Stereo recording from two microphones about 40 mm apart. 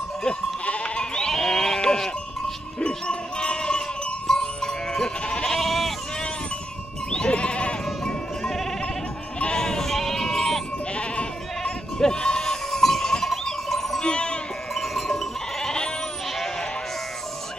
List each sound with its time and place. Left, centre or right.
0.7 s bleat: left
1.3 s livestock: centre
2.8 s sheep: left
5.2 s goat: left
5.5 s sheep: centre
7.1 s sheep: left
8.0 s sheep: centre
11.0 s sheep: left; by 14.0 s centre
14.0 s sheep: left
14.7 s livestock: centre